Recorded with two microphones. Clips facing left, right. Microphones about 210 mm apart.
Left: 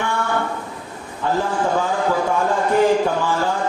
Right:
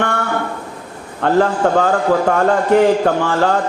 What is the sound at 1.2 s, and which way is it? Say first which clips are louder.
A man's voice: right 7 dB; 70° right (ahead or behind).